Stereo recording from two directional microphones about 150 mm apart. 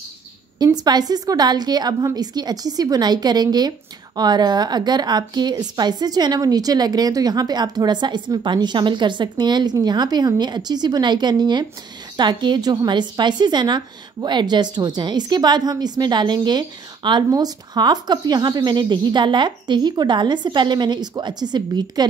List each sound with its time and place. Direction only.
0.7 s a woman's voice: 25° right (ahead or behind)